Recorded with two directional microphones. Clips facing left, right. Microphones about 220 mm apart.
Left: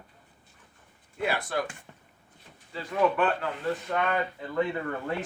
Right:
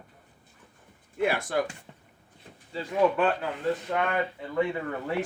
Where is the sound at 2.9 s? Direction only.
25° right (ahead or behind).